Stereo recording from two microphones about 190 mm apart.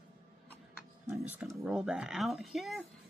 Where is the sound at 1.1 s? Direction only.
5° right (ahead or behind).